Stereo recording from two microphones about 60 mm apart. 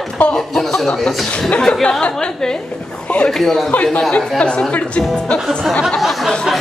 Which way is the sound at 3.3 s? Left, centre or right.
Centre.